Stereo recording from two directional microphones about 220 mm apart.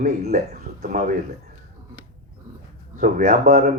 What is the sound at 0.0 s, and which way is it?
Speech, 30° right (ahead or behind).